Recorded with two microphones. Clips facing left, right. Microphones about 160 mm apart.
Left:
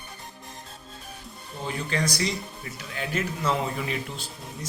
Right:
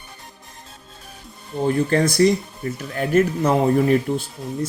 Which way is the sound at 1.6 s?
50° right (ahead or behind).